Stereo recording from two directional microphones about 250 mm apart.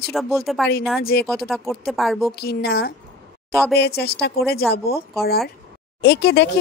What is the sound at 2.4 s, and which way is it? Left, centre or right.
A woman's voice, left.